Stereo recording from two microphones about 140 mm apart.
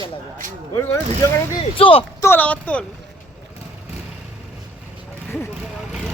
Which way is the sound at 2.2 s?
15° left (ahead or behind).